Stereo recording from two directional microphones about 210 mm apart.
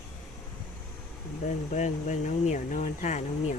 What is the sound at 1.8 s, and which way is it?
Speech, 35° left (ahead or behind).